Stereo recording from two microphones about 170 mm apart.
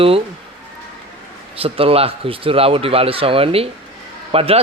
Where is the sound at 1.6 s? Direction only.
35° right (ahead or behind).